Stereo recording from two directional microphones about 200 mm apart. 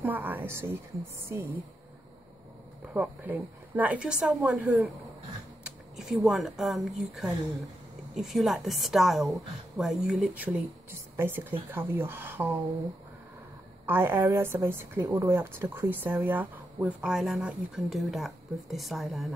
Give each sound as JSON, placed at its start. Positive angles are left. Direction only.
{"t": 0.0, "sound": "a sound", "side_deg": -10}
{"t": 2.9, "sound": "a woman's voice", "side_deg": -10}
{"t": 13.8, "sound": "a woman's voice", "side_deg": -10}